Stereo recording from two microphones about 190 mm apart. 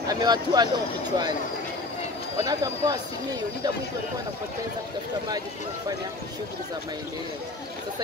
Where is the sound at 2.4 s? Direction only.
20° right (ahead or behind).